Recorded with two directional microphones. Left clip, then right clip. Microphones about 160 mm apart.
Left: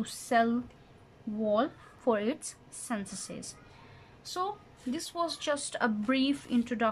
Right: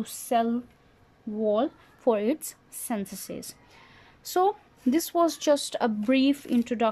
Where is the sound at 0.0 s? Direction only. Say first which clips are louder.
Right 2 dB; 20° right (ahead or behind).